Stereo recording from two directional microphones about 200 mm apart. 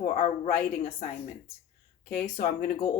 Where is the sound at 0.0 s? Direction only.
40° left (ahead or behind).